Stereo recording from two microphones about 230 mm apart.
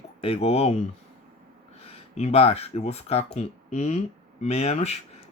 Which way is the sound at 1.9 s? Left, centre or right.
Left.